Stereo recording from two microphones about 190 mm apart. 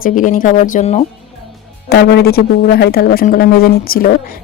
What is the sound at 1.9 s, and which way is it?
Speech, 55° left (ahead or behind).